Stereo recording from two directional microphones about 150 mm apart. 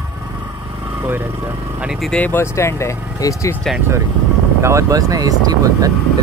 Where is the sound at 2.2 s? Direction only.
15° left (ahead or behind).